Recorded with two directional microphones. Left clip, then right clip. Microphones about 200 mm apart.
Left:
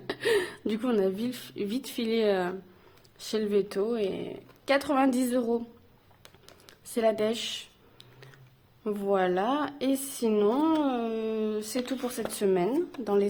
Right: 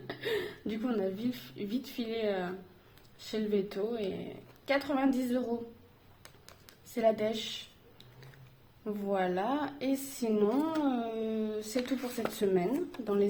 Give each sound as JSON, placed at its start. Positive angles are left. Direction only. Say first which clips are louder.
{"t": 0.1, "sound": "a woman's voice", "louder": "left 8 dB", "side_deg": 45}
{"t": 6.2, "sound": "music", "louder": "left 3 dB", "side_deg": 10}
{"t": 6.9, "sound": "a woman's voice", "louder": "left 3 dB", "side_deg": 50}
{"t": 8.8, "sound": "a woman's voice", "louder": "left 6 dB", "side_deg": 45}